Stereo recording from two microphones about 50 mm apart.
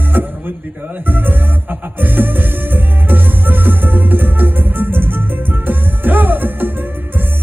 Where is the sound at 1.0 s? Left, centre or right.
Right.